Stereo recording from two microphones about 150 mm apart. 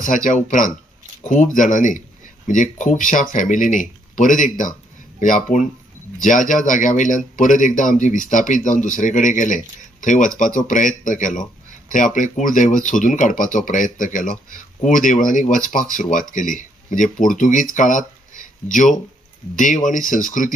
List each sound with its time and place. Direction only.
0.0 s speech: 60° left (ahead or behind)